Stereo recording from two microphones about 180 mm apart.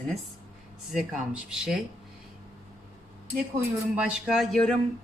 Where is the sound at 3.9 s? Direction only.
5° right (ahead or behind).